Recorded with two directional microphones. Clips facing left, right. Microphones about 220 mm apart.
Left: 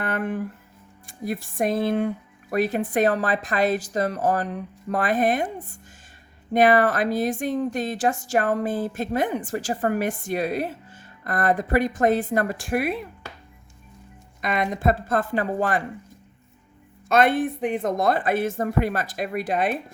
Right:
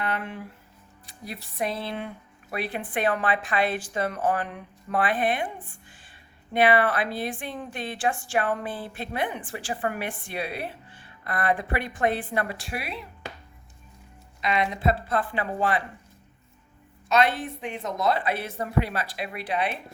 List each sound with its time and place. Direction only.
0.0 s speech: 50° left (ahead or behind)
14.4 s speech: 45° left (ahead or behind)
17.1 s speech: 50° left (ahead or behind)